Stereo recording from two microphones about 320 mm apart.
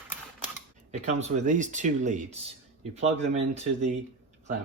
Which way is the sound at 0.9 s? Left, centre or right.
Right.